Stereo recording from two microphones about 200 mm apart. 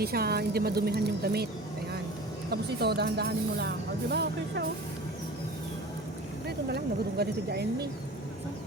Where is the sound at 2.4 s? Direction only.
55° right (ahead or behind).